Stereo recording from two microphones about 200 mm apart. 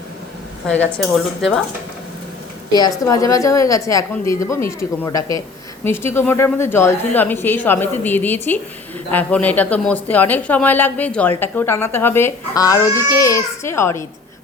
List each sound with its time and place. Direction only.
1.1 s speech: centre (ahead or behind)
3.1 s speech: 15° left (ahead or behind)